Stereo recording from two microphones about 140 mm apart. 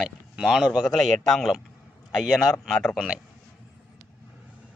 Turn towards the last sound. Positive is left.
turn(degrees=0)  # may be behind; listen again after turning